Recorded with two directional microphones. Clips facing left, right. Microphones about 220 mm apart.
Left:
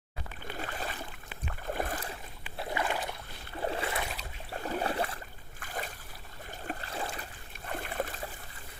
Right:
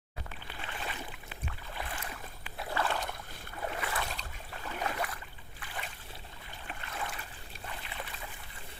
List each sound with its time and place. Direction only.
0.5 s boat: 40° left (ahead or behind)
2.6 s rowboat: 15° left (ahead or behind)
3.6 s splash: 30° left (ahead or behind)
4.0 s boat: 5° left (ahead or behind)
4.5 s boat: 40° left (ahead or behind)
5.5 s a sound: 45° left (ahead or behind)
7.7 s a sound: 50° left (ahead or behind)